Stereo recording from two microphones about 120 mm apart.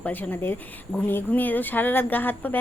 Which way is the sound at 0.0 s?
15° left (ahead or behind).